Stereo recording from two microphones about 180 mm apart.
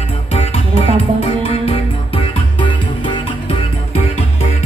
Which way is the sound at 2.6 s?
30° left (ahead or behind).